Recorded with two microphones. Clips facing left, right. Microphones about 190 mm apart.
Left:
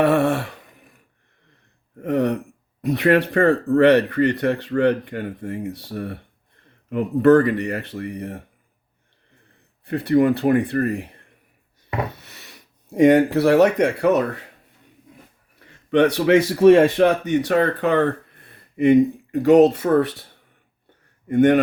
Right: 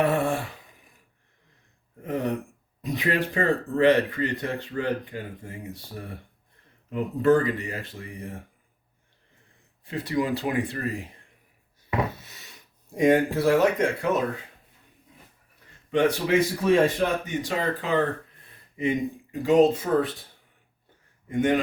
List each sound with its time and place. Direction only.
0.0 s a sound: 70° left (ahead or behind)
2.0 s speech: 70° left (ahead or behind)
9.8 s speech: 60° left (ahead or behind)
12.2 s speech: 65° left (ahead or behind)
15.9 s speech: 70° left (ahead or behind)
21.2 s speech: 65° left (ahead or behind)